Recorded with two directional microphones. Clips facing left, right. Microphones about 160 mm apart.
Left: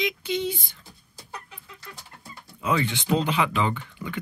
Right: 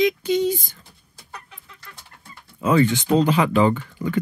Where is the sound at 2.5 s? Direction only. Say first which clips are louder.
Right 8 dB; 45° right (ahead or behind).